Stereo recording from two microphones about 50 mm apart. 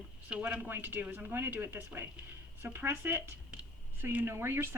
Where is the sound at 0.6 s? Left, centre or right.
Right.